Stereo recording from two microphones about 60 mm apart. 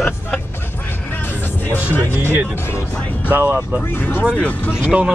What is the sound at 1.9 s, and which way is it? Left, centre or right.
Speech, left.